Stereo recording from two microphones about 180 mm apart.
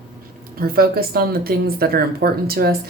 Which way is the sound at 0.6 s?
55° right (ahead or behind).